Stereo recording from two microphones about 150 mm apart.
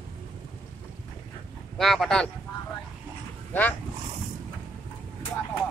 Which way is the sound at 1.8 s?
Centre (ahead or behind).